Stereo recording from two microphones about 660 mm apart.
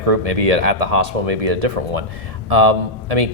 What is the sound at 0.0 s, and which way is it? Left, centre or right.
A man's voice, right.